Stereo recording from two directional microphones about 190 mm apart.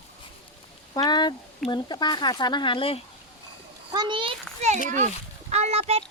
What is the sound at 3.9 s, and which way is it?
Speech, 25° right (ahead or behind).